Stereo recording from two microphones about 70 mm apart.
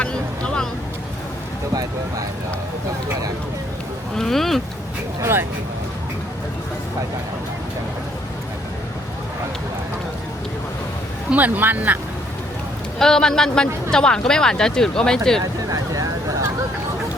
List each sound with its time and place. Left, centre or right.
0.0 s vehicle: centre
1.7 s speech: right
4.2 s speech: centre
5.2 s speech: right
11.3 s speech: right
13.0 s speech: centre
15.7 s vehicle: right